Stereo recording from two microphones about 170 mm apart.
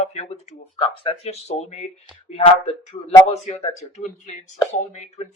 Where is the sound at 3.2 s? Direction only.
35° left (ahead or behind).